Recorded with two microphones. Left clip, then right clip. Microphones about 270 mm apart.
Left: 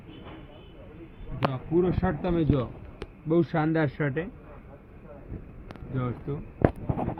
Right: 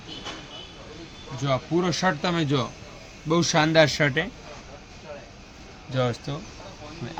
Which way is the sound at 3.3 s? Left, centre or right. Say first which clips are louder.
Right 4 dB; right.